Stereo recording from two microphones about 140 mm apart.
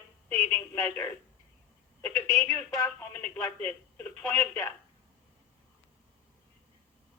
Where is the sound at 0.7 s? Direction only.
20° left (ahead or behind).